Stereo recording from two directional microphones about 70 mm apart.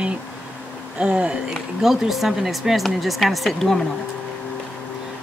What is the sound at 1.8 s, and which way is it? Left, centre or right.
Speech, centre.